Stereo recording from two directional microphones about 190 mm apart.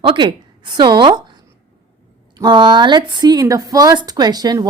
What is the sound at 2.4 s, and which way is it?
Speech, 25° right (ahead or behind).